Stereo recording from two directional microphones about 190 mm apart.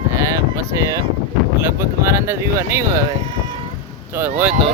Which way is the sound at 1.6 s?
15° right (ahead or behind).